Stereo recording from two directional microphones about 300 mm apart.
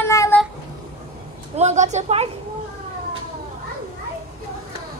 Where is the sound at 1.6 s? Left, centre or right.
Right.